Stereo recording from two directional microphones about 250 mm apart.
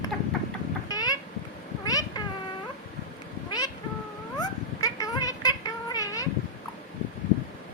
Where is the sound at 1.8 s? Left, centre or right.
Centre.